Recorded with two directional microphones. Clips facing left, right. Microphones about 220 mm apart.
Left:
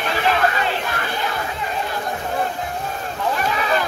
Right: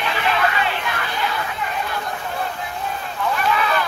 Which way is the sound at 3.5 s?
35° left (ahead or behind).